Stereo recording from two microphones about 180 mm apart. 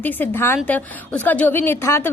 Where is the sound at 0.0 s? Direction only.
10° left (ahead or behind).